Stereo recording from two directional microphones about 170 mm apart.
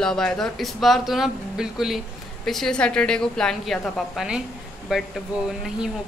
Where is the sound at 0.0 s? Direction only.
5° left (ahead or behind).